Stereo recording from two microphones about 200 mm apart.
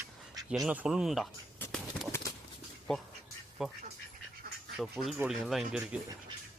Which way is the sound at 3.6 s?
5° right (ahead or behind).